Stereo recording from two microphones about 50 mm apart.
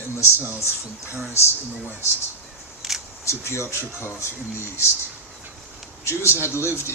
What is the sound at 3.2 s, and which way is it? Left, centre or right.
A man's voice, left.